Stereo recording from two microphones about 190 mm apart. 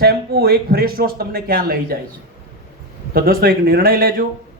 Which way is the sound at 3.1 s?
55° right (ahead or behind).